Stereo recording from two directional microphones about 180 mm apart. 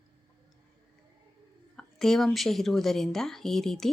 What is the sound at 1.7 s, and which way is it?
A woman's voice, centre (ahead or behind).